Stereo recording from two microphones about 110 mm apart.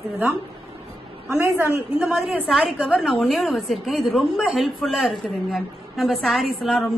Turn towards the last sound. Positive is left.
turn(degrees=0)  # may be behind; listen again after turning